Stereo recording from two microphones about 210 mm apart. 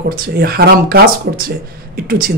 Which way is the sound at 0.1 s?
45° right (ahead or behind).